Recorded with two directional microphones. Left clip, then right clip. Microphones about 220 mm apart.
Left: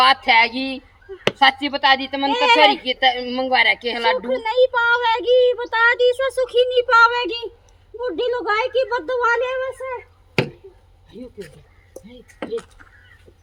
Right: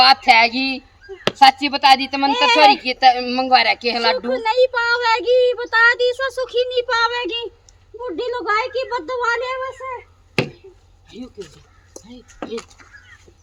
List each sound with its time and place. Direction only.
0.0 s a woman's voice: 15° right (ahead or behind)
2.3 s speech: 10° left (ahead or behind)
2.8 s a woman's voice: 20° right (ahead or behind)
4.3 s speech: centre (ahead or behind); by 10.5 s 20° left (ahead or behind)
11.1 s a woman's voice: 20° right (ahead or behind)
11.9 s a sound: 15° right (ahead or behind)